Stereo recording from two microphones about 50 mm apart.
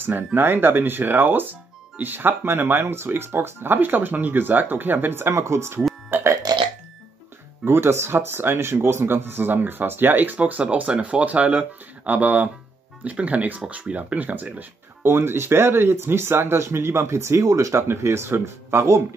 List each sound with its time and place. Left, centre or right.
0.0 s speech: right
5.3 s speech: right
6.0 s burping: right
7.6 s speech: right
15.0 s speech: right
17.8 s speech: right